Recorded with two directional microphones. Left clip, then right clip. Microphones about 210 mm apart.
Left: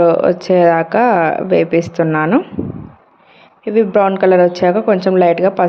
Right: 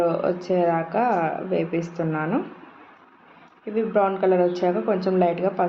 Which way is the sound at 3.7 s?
45° left (ahead or behind).